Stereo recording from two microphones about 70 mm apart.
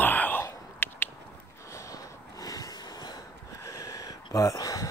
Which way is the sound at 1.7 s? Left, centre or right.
Left.